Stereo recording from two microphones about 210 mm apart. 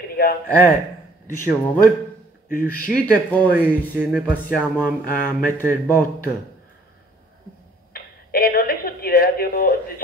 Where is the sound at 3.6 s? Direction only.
5° right (ahead or behind).